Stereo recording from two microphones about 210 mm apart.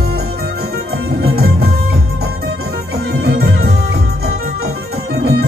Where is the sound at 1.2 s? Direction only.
45° right (ahead or behind).